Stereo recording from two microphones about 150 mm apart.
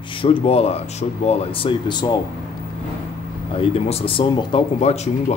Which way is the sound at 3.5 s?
40° left (ahead or behind).